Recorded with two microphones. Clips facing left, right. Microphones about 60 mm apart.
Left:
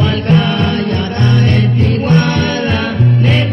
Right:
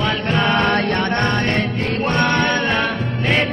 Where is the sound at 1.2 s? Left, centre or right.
Right.